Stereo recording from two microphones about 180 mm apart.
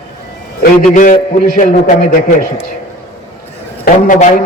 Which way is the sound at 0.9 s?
45° left (ahead or behind).